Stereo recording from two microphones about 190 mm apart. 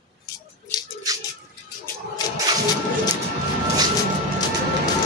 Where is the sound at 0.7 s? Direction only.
20° left (ahead or behind).